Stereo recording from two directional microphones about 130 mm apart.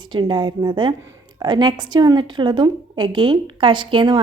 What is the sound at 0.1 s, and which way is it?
A woman's voice, 35° right (ahead or behind).